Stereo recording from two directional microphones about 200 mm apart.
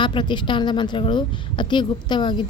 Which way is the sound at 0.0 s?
25° left (ahead or behind).